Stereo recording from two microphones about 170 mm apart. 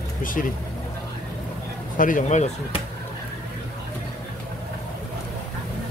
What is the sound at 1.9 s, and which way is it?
Speech, 50° left (ahead or behind).